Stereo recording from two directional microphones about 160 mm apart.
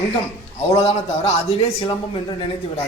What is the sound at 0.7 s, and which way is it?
A man's voice, 40° left (ahead or behind).